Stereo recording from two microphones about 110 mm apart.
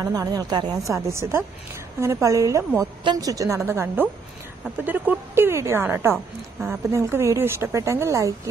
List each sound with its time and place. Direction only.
0.0 s speech: 35° right (ahead or behind)
0.9 s speech: 25° right (ahead or behind)